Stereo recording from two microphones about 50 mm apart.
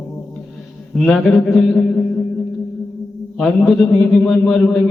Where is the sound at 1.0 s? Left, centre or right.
Centre.